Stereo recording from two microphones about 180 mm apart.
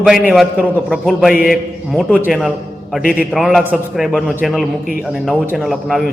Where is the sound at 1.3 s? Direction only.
55° left (ahead or behind).